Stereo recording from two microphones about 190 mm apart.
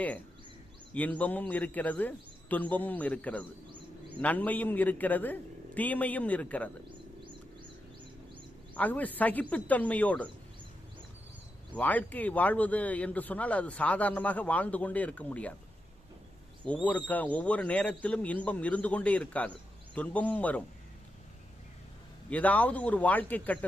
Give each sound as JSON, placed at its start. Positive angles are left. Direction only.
{"t": 0.9, "sound": "a man's voice", "side_deg": 10}
{"t": 8.7, "sound": "a man's voice", "side_deg": 10}
{"t": 11.7, "sound": "a man's voice", "side_deg": 10}
{"t": 16.6, "sound": "a man's voice", "side_deg": 5}
{"t": 22.3, "sound": "a man's voice", "side_deg": 5}